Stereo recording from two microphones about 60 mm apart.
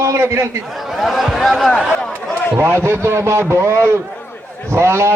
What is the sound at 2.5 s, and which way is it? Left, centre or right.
A man's voice, right.